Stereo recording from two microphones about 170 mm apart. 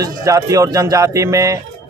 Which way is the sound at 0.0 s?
20° right (ahead or behind).